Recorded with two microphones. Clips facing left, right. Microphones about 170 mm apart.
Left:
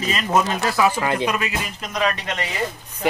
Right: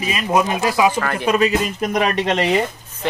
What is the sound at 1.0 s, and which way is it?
Speech, 20° left (ahead or behind).